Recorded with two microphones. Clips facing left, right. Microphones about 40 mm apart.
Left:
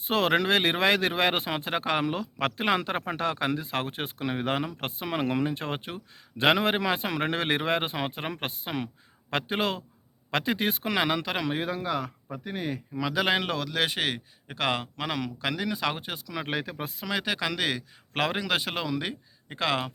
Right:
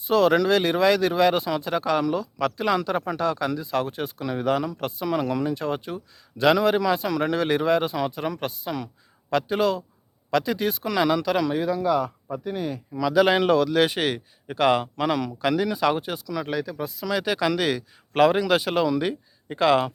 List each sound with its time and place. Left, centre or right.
0.0 s a man's voice: left
11.6 s a man's voice: left
12.5 s a man's voice: left
16.3 s a man's voice: left
17.1 s speech: centre